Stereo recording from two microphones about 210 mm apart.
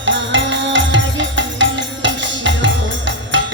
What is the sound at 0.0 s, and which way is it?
Music, 60° right (ahead or behind).